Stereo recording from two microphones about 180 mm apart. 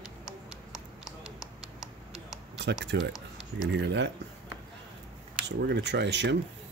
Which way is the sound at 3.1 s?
Centre (ahead or behind).